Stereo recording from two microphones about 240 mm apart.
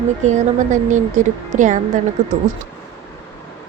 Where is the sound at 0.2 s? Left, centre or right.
Right.